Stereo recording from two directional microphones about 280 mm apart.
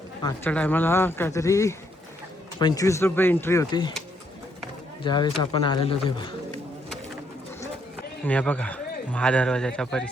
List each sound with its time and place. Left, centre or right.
0.2 s speech: centre
5.0 s speech: centre
8.2 s a man's voice: centre